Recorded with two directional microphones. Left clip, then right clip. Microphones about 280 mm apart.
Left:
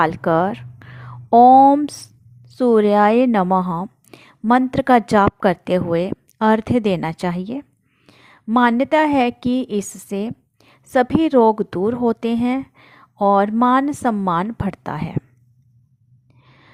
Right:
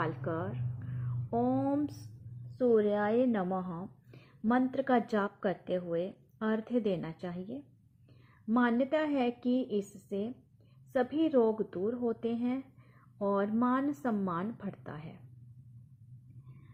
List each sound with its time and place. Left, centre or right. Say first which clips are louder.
0.0 s a woman's voice: left 19 dB; left